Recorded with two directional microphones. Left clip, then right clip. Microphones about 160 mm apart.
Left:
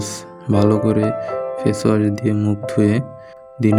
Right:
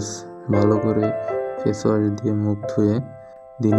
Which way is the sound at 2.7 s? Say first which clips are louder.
Left 3 dB; 75° left (ahead or behind).